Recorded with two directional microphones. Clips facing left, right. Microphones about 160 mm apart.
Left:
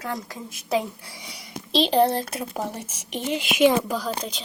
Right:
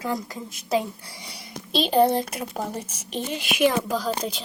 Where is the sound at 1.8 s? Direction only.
5° right (ahead or behind).